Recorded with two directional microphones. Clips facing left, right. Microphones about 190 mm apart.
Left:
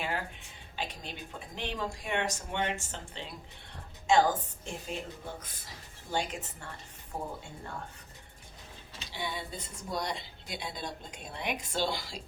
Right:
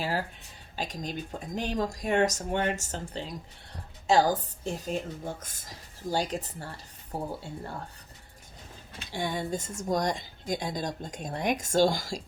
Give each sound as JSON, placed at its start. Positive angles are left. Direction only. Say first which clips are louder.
{"t": 0.0, "sound": "speech", "louder": "right 4 dB", "side_deg": -35}
{"t": 8.9, "sound": "speech", "louder": "right 6 dB", "side_deg": -50}